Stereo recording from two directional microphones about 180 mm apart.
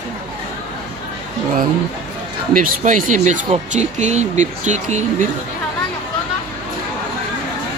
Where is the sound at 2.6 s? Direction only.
45° right (ahead or behind).